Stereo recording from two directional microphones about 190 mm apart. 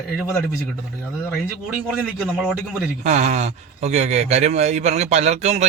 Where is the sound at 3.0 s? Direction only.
35° right (ahead or behind).